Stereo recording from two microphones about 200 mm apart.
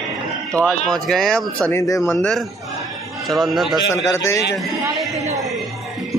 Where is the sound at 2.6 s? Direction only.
Centre (ahead or behind).